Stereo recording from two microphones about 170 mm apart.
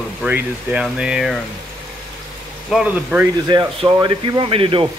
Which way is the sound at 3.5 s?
25° right (ahead or behind).